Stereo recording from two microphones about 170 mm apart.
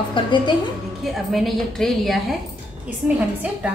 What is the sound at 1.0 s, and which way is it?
A woman's voice, centre (ahead or behind).